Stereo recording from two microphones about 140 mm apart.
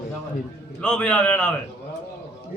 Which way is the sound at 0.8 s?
10° left (ahead or behind).